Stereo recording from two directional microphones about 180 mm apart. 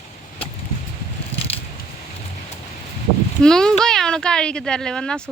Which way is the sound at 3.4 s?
5° left (ahead or behind).